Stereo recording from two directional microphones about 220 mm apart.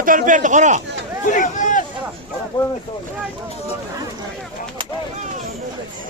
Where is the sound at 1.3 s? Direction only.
35° left (ahead or behind).